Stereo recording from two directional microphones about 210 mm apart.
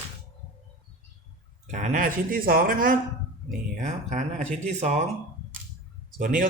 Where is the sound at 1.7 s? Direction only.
35° right (ahead or behind).